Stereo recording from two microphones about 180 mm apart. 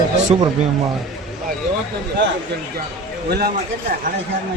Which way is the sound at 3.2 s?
60° right (ahead or behind).